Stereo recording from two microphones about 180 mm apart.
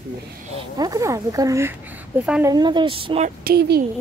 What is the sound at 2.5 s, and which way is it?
Speech, 25° right (ahead or behind).